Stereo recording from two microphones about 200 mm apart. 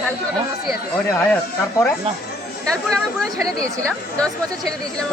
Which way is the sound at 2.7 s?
5° left (ahead or behind).